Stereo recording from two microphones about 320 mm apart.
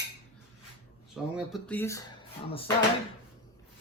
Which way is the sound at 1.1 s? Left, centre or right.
Centre.